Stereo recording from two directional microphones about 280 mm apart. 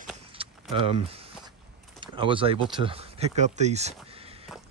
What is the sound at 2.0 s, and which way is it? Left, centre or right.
Speech, centre.